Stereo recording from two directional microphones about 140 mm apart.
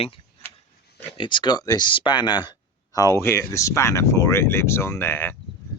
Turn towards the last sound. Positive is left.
turn(degrees=15)  # may be behind; listen again after turning